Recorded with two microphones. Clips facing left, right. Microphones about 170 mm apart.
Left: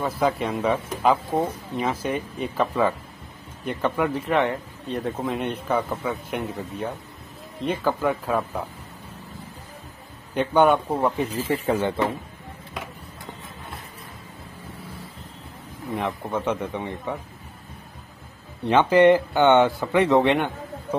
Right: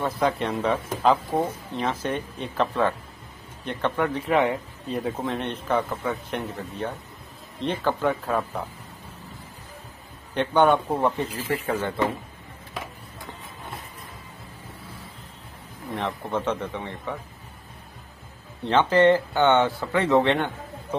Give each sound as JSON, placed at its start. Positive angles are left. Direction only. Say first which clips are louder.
{"t": 0.0, "sound": "a man's voice", "louder": "left 1 dB", "side_deg": 0}
{"t": 10.3, "sound": "speech", "louder": "left 1 dB", "side_deg": 10}
{"t": 11.6, "sound": "speech", "louder": "left 6 dB", "side_deg": 20}
{"t": 15.9, "sound": "speech", "louder": "left 1 dB", "side_deg": 10}
{"t": 18.7, "sound": "speech", "louder": "left 2 dB", "side_deg": 15}